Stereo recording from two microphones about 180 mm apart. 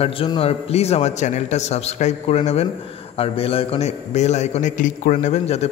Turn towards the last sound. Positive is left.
turn(degrees=35)  # may be behind; listen again after turning